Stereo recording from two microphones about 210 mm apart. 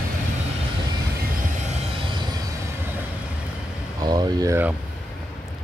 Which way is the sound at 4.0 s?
15° right (ahead or behind).